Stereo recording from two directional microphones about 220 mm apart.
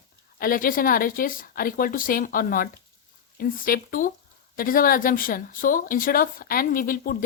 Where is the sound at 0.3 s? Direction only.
40° left (ahead or behind).